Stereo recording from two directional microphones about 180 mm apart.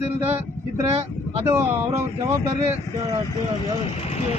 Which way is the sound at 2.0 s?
15° right (ahead or behind).